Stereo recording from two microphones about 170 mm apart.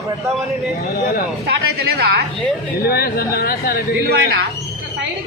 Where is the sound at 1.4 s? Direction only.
70° right (ahead or behind).